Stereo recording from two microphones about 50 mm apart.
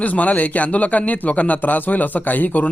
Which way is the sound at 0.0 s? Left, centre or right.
Left.